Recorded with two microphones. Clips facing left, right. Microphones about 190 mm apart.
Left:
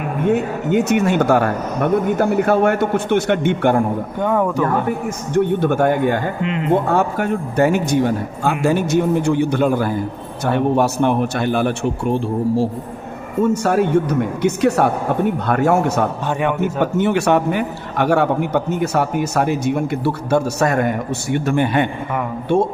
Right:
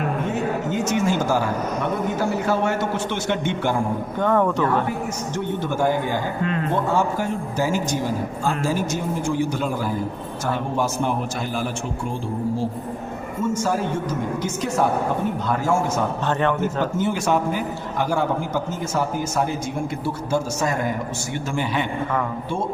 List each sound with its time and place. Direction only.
0.7 s a man's voice: 65° left (ahead or behind)
4.2 s speech: 10° left (ahead or behind)
5.3 s a man's voice: 60° left (ahead or behind)
6.4 s speech: 20° left (ahead or behind)
6.8 s a man's voice: 60° left (ahead or behind)